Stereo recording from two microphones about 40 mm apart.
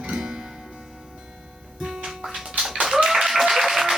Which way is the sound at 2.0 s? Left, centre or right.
Centre.